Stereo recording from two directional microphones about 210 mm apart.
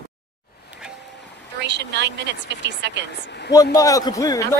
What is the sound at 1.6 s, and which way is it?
A woman's voice, 55° right (ahead or behind).